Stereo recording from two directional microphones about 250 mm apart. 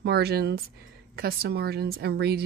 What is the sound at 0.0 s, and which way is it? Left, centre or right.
Speech, right.